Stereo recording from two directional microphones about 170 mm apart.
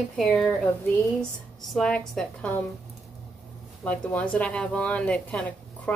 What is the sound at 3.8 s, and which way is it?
A woman's voice, 10° left (ahead or behind).